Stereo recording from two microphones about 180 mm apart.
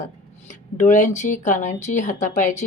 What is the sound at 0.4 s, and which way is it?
Speech, 45° left (ahead or behind).